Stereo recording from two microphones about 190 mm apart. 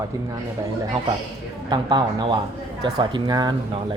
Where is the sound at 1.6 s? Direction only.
20° right (ahead or behind).